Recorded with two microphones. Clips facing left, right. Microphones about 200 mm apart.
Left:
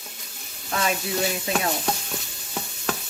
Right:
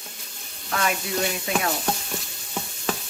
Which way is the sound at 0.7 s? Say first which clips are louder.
Even; 25° left (ahead or behind).